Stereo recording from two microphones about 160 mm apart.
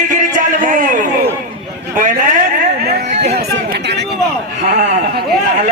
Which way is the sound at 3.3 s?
85° right.